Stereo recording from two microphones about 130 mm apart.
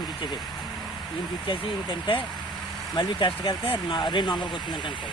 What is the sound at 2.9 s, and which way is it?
Speech, 35° left (ahead or behind).